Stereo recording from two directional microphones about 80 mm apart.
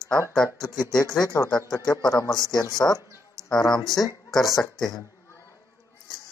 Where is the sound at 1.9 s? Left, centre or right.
Left.